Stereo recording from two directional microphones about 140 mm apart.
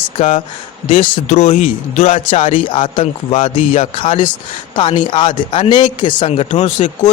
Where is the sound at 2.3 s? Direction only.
40° left (ahead or behind).